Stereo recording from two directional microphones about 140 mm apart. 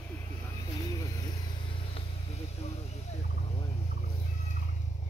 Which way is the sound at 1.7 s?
45° left (ahead or behind).